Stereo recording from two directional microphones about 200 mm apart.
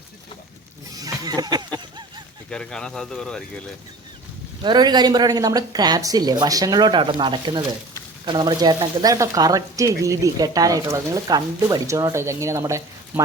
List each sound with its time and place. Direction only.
0.9 s a sound: 20° right (ahead or behind)
2.5 s speech: 5° left (ahead or behind)
4.6 s speech: 20° right (ahead or behind)